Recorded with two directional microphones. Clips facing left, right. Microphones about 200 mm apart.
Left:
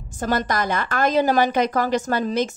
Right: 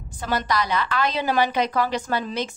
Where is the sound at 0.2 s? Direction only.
45° left (ahead or behind).